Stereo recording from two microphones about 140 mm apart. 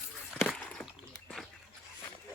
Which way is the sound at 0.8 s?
15° left (ahead or behind).